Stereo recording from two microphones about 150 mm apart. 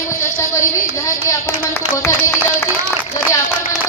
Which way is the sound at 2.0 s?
20° left (ahead or behind).